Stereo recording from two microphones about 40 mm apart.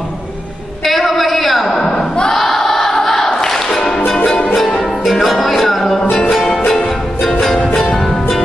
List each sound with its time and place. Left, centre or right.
0.8 s a sound: centre
1.9 s crowd: centre
2.3 s music: centre